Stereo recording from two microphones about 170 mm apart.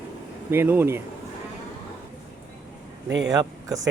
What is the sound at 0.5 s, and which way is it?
Speech, 15° right (ahead or behind).